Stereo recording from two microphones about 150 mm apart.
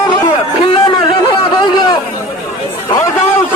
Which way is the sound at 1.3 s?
30° left (ahead or behind).